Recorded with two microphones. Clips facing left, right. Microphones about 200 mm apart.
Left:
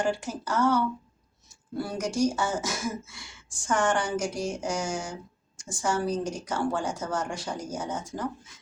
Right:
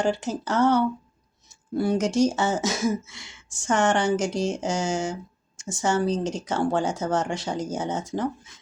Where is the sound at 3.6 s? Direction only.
75° right (ahead or behind).